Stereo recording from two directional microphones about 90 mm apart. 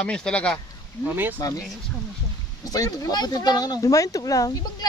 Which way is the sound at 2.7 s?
40° left (ahead or behind).